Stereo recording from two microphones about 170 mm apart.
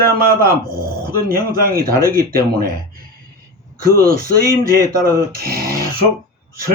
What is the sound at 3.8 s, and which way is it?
Speech, 60° right (ahead or behind).